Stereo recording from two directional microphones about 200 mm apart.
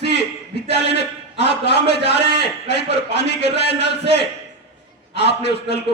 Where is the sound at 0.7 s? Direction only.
55° left (ahead or behind).